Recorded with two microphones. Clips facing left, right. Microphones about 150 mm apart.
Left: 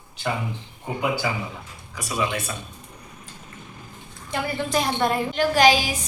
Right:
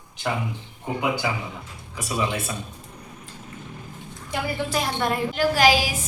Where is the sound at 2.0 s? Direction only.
30° right (ahead or behind).